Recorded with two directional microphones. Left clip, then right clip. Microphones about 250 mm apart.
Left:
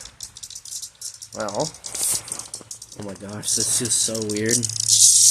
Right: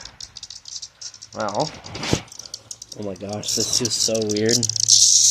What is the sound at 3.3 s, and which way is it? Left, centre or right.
Speech, centre.